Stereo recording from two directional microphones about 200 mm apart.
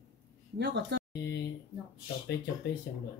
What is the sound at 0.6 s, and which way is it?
Speech, 60° right (ahead or behind).